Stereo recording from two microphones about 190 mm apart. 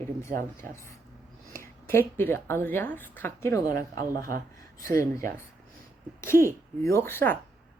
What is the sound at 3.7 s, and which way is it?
Speech, 50° right (ahead or behind).